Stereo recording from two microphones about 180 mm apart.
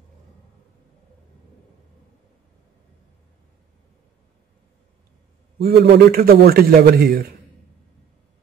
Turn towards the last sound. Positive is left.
turn(degrees=-60)  # may be behind; listen again after turning